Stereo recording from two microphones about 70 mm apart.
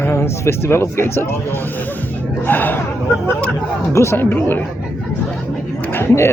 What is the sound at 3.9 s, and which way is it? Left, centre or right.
Speech, left.